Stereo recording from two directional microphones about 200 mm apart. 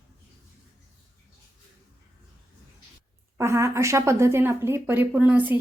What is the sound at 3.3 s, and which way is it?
Speech, 15° right (ahead or behind).